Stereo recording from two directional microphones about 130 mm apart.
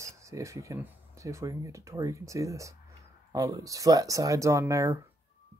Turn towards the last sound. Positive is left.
turn(degrees=-25)  # may be behind; listen again after turning